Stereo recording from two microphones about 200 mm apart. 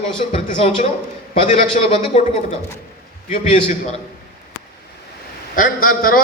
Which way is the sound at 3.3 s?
40° left (ahead or behind).